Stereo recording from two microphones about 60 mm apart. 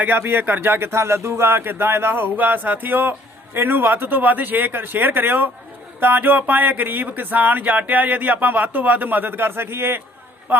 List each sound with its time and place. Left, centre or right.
0.2 s speech: right